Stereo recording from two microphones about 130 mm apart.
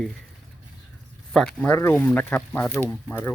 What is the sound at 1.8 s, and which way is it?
Speech, 20° left (ahead or behind).